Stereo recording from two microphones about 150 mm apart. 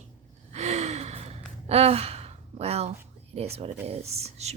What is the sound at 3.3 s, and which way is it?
A woman's voice, 45° right (ahead or behind).